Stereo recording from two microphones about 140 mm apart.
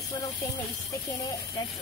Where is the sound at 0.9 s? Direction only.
25° left (ahead or behind).